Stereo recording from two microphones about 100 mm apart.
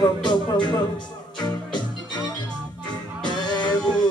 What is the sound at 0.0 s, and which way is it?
Music, 45° left (ahead or behind).